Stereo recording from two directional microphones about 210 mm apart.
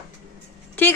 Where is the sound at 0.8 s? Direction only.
10° left (ahead or behind).